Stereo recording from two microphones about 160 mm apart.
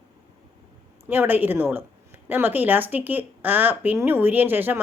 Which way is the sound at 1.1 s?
10° right (ahead or behind).